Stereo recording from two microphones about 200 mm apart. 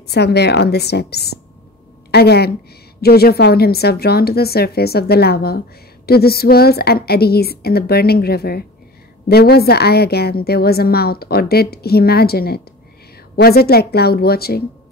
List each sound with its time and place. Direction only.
0.1 s a woman's voice: 55° left (ahead or behind)